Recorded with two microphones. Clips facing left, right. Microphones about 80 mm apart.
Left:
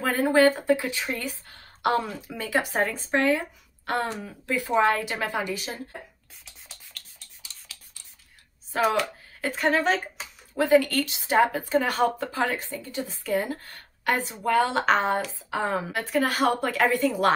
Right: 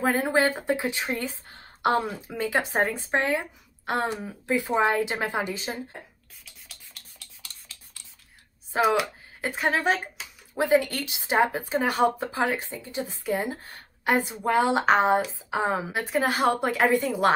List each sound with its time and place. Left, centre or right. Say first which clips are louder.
0.0 s speech: left 3 dB; right
9.4 s speech: left 2 dB; centre